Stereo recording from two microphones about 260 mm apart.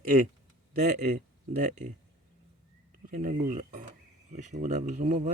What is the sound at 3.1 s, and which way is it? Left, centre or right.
Speech, right.